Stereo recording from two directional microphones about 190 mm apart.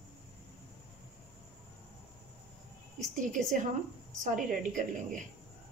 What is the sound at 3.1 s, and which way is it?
A woman's voice, 40° right (ahead or behind).